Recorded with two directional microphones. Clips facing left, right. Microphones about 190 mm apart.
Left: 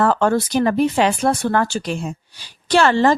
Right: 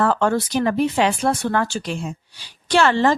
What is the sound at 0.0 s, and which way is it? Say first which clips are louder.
A woman's voice: left 2 dB; 40° left (ahead or behind).